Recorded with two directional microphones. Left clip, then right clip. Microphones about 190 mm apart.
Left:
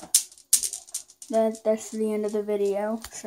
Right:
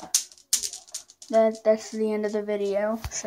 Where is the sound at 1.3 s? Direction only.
10° left (ahead or behind).